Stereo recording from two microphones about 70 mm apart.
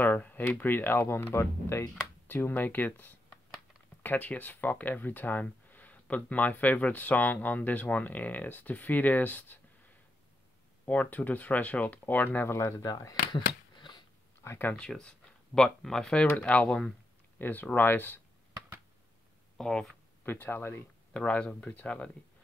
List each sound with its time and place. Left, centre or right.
0.0 s a sound: left
0.6 s speech: left
10.9 s speech: left
12.8 s speech: left
13.3 s a sound: left
14.4 s speech: left
14.8 s speech: centre
16.3 s speech: left
19.5 s speech: centre
20.2 s speech: left
21.1 s speech: centre